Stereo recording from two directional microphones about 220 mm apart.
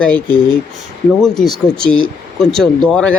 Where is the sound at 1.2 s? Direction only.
Centre (ahead or behind).